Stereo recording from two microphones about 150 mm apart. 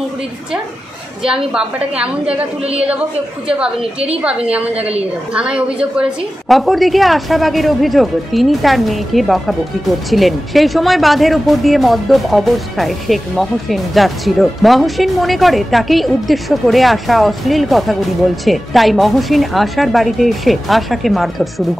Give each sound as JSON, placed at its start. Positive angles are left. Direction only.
{"t": 1.2, "sound": "a woman's voice", "side_deg": -5}
{"t": 2.6, "sound": "a woman's voice", "side_deg": -40}
{"t": 3.4, "sound": "a woman's voice", "side_deg": -5}
{"t": 4.7, "sound": "a woman's voice", "side_deg": -40}
{"t": 5.3, "sound": "a woman's voice", "side_deg": -5}